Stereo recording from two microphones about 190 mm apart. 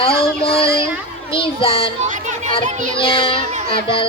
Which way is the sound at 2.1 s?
40° right (ahead or behind).